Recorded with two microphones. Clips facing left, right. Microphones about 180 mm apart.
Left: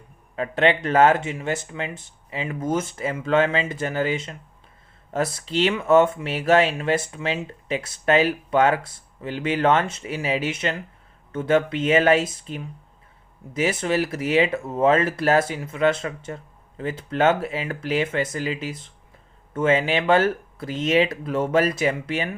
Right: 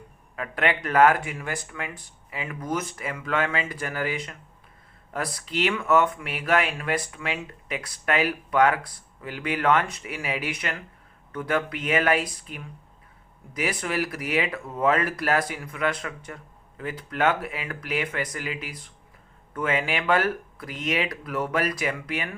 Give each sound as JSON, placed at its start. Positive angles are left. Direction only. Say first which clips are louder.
{"t": 0.3, "sound": "speech", "louder": "left 6 dB", "side_deg": 30}